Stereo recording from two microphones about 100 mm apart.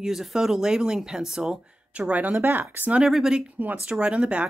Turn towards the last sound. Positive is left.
turn(degrees=-10)  # may be behind; listen again after turning